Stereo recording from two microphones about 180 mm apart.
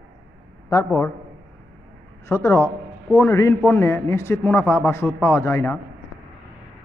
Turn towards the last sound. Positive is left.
turn(degrees=15)  # may be behind; listen again after turning